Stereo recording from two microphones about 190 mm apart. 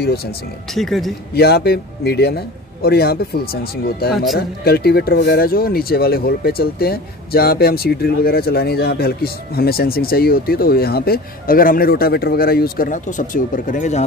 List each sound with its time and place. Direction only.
0.7 s a man's voice: centre (ahead or behind)
1.3 s a man's voice: 55° left (ahead or behind); by 14.0 s 40° left (ahead or behind)